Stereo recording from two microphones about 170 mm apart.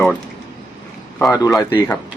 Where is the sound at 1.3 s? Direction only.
20° left (ahead or behind).